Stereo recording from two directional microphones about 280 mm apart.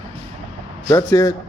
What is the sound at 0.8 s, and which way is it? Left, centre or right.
Speech, centre.